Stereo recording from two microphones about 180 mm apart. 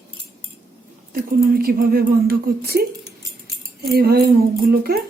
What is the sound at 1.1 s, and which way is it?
Speech, 55° right (ahead or behind).